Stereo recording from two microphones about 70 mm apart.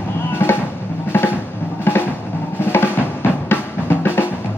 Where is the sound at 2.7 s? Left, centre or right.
Left.